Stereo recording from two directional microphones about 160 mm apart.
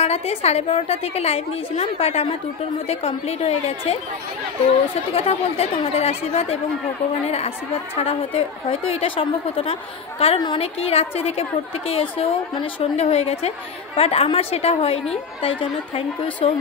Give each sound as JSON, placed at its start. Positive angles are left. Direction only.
{"t": 0.0, "sound": "a woman's voice", "side_deg": 40}
{"t": 5.1, "sound": "a woman's voice", "side_deg": 40}